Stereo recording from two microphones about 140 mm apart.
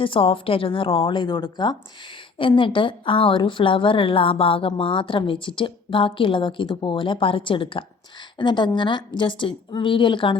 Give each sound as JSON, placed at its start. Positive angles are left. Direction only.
{"t": 0.0, "sound": "a woman's voice", "side_deg": 40}